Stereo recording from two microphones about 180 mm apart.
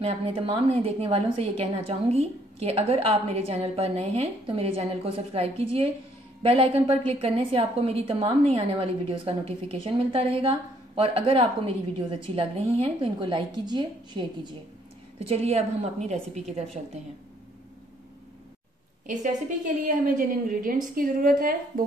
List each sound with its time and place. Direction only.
0.0 s a woman's voice: 30° right (ahead or behind)
19.0 s a woman's voice: 45° right (ahead or behind)